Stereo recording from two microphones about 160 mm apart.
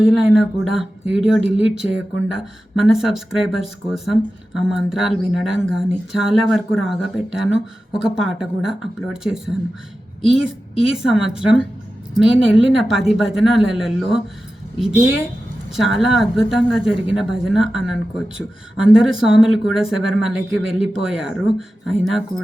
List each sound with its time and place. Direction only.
0.0 s speech: centre (ahead or behind)
15.7 s speech: centre (ahead or behind)